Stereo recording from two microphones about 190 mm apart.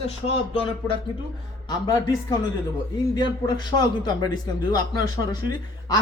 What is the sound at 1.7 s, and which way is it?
Speech, 20° left (ahead or behind).